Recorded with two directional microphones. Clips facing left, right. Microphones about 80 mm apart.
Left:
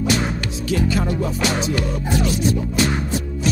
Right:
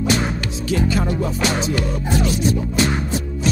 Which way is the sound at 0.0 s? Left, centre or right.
Right.